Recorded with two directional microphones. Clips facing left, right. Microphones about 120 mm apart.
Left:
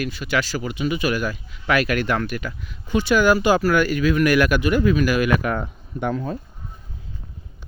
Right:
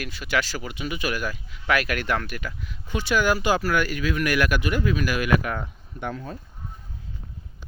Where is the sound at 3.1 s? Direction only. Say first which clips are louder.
Left 5 dB; 60° left (ahead or behind).